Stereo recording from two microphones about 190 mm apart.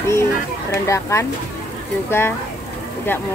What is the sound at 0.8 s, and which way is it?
Speech, 15° left (ahead or behind).